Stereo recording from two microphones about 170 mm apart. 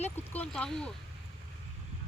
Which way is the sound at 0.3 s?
5° left (ahead or behind).